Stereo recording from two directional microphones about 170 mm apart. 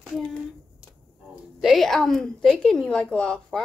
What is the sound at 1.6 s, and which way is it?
A woman's voice, centre (ahead or behind).